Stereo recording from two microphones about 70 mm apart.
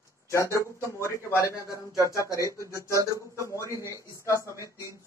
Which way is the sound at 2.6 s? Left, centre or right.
Right.